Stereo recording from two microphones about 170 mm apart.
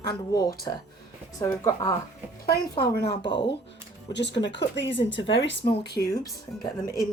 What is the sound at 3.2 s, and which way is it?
Speech, 30° left (ahead or behind).